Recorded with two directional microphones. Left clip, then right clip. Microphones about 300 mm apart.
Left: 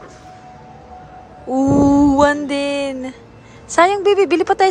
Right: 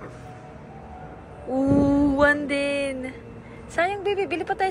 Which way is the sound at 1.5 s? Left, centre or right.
Centre.